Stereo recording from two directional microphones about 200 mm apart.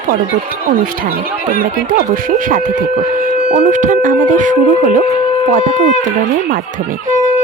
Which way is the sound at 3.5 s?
35° right (ahead or behind).